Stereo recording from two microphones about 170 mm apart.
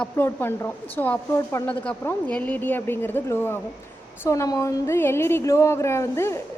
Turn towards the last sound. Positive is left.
turn(degrees=15)  # may be behind; listen again after turning